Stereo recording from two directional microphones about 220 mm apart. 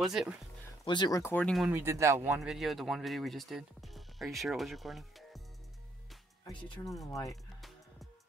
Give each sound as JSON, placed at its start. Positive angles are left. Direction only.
{"t": 0.0, "sound": "speech", "side_deg": 0}
{"t": 0.8, "sound": "speech", "side_deg": 20}
{"t": 1.7, "sound": "speech", "side_deg": -10}
{"t": 6.4, "sound": "speech", "side_deg": 20}